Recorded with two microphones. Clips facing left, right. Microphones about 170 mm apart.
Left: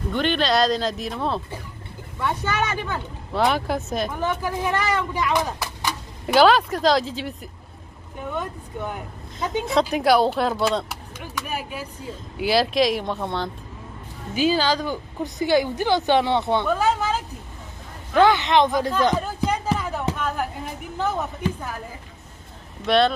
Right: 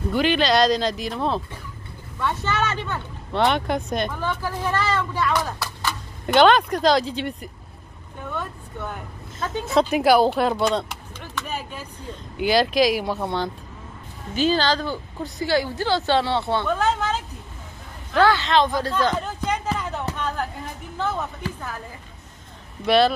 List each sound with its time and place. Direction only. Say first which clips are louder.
0.1 s speech: right 2 dB; 5° right (ahead or behind)
2.1 s speech: even; 10° left (ahead or behind)
4.1 s speech: left 2 dB; 15° left (ahead or behind)
6.2 s speech: even; 5° left (ahead or behind)
8.2 s speech: left 2 dB; 15° left (ahead or behind)
9.7 s speech: right 2 dB; centre (ahead or behind)
14.3 s speech: even; 10° left (ahead or behind)
18.1 s speech: left 1 dB; 20° left (ahead or behind)
19.4 s a sound: left 1 dB; 10° left (ahead or behind)
21.0 s speech: left 2 dB; 15° left (ahead or behind)
22.8 s speech: right 1 dB; 5° right (ahead or behind)